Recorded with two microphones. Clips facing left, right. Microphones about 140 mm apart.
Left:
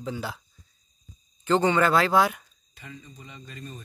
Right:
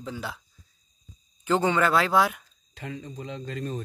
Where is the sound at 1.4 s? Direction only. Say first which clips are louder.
Left 1 dB; 5° right (ahead or behind).